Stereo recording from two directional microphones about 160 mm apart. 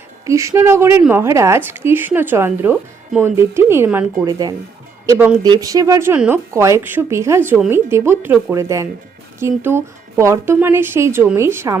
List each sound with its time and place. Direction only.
0.3 s speech: 20° right (ahead or behind)